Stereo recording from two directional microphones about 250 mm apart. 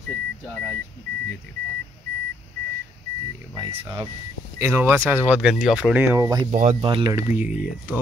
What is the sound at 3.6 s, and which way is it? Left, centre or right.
Speech, centre.